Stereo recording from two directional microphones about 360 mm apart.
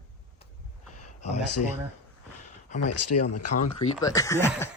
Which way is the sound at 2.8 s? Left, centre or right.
Left.